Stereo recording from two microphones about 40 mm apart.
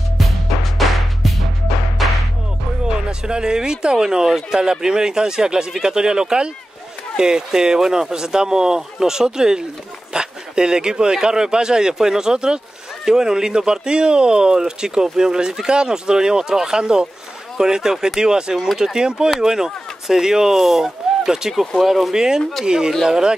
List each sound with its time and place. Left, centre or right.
0.2 s music: centre
2.8 s speech: right; by 22.1 s centre
22.1 s speech: centre